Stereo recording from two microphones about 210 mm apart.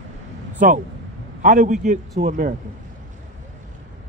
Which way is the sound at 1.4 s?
40° right (ahead or behind).